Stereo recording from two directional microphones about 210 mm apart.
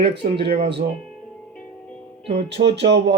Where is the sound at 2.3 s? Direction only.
55° right (ahead or behind).